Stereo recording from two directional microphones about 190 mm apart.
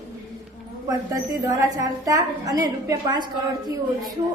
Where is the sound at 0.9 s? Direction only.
20° right (ahead or behind).